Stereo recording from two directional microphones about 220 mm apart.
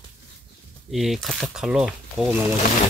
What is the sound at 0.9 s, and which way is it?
Speech, centre (ahead or behind).